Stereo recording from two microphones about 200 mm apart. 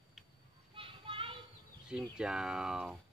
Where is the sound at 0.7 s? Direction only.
25° right (ahead or behind).